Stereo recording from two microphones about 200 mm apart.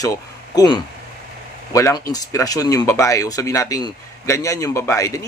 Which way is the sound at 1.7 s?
15° left (ahead or behind).